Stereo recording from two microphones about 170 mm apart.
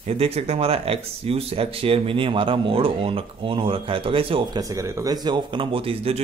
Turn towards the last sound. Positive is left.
turn(degrees=-35)  # may be behind; listen again after turning